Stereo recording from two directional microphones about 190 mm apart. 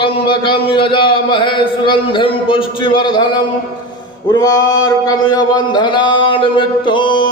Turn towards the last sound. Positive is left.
turn(degrees=25)  # may be behind; listen again after turning